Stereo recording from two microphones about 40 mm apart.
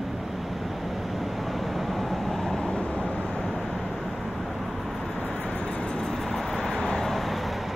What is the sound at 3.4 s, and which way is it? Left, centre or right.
Vehicle, centre.